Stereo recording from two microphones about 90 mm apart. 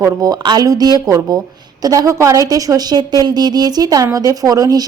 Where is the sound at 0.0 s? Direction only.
45° right (ahead or behind).